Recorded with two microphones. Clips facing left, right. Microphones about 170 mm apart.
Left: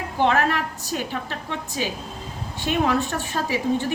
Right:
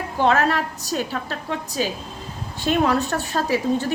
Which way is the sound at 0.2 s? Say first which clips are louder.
Right 2 dB; 40° right (ahead or behind).